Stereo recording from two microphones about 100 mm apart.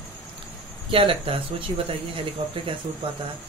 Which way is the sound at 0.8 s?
65° right (ahead or behind).